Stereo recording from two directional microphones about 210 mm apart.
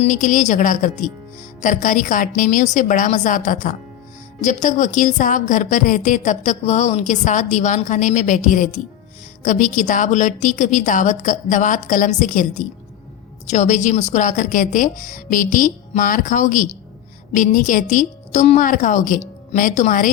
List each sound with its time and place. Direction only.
0.0 s a woman's voice: 35° left (ahead or behind)